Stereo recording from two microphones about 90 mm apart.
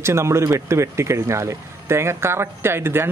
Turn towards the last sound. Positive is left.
turn(degrees=-25)  # may be behind; listen again after turning